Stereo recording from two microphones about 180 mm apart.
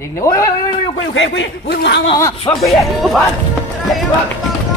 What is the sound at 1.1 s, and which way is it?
Speech, 90° left.